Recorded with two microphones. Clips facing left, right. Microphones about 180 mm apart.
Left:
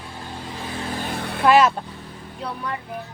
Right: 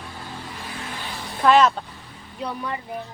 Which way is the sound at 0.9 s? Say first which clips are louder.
Left 6 dB; 50° left (ahead or behind).